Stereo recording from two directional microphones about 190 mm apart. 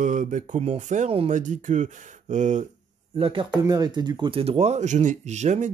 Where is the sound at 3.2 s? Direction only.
25° right (ahead or behind).